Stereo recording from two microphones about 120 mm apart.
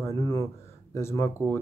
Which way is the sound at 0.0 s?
25° left (ahead or behind).